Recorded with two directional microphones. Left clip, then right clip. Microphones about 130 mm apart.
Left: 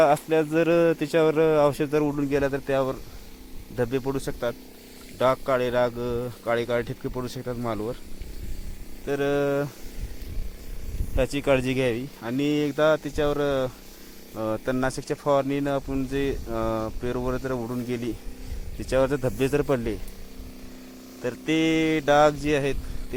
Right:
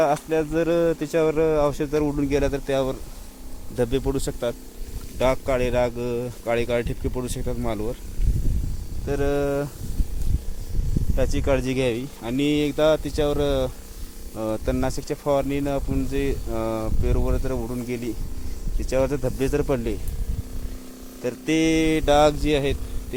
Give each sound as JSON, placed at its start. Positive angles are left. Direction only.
{"t": 0.0, "sound": "speech", "side_deg": 15}
{"t": 2.1, "sound": "a man's voice", "side_deg": -15}
{"t": 7.5, "sound": "speech", "side_deg": -10}
{"t": 9.0, "sound": "speech", "side_deg": 0}
{"t": 11.2, "sound": "speech", "side_deg": 10}
{"t": 11.6, "sound": "speech", "side_deg": -5}
{"t": 21.2, "sound": "speech", "side_deg": -15}